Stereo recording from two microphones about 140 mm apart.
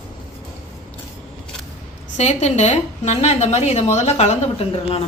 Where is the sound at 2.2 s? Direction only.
55° left (ahead or behind).